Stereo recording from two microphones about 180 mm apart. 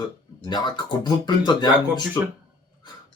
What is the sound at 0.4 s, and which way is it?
Speech, 25° left (ahead or behind).